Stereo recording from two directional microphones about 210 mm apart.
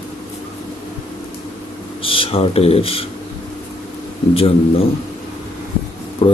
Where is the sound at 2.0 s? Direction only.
25° left (ahead or behind).